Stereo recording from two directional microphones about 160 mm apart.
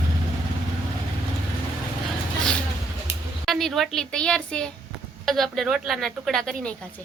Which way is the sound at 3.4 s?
Centre (ahead or behind).